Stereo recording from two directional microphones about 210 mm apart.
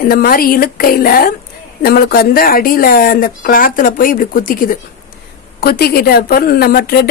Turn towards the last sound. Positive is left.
turn(degrees=45)  # may be behind; listen again after turning